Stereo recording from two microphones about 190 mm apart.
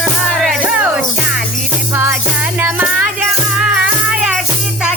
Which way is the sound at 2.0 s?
10° right (ahead or behind).